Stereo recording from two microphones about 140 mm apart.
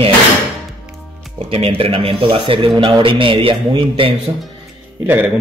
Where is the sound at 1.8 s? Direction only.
40° right (ahead or behind).